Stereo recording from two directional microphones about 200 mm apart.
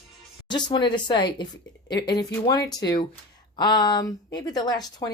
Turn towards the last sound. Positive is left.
turn(degrees=20)  # may be behind; listen again after turning